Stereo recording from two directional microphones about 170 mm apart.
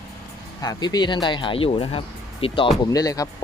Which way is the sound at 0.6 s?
25° left (ahead or behind).